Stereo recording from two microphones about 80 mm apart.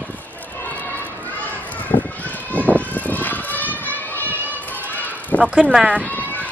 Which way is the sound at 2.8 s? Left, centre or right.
Left.